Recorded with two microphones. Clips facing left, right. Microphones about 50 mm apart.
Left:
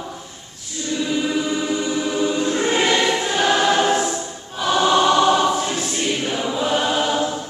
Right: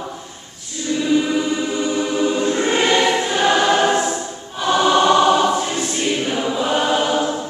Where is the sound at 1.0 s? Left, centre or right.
Centre.